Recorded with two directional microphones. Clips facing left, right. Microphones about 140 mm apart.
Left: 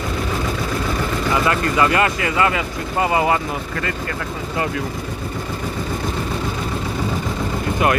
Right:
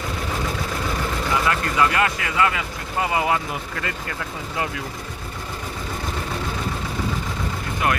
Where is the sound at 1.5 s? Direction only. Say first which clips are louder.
Left 3 dB; 5° left (ahead or behind).